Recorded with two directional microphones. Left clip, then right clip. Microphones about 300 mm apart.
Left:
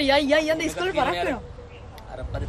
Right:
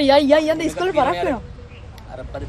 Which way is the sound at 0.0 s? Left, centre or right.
Centre.